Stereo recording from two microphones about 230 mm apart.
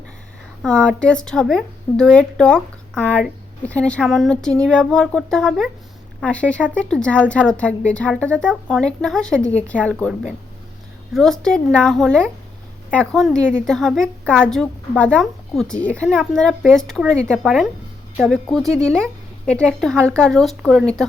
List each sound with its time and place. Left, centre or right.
0.6 s a woman's voice: centre